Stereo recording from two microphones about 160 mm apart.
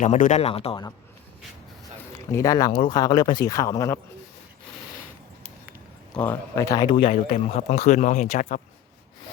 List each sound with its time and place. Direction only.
0.0 s speech: 50° left (ahead or behind)
2.3 s speech: 20° left (ahead or behind)
6.1 s speech: 15° left (ahead or behind); by 8.6 s 50° left (ahead or behind)